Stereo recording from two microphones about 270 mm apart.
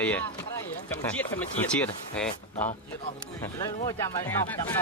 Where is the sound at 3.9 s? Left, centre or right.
Centre.